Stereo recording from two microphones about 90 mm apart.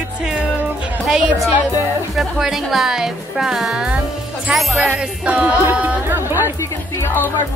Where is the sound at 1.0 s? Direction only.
5° right (ahead or behind).